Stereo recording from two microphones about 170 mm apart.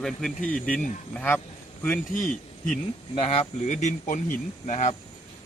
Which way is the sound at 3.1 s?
35° left (ahead or behind).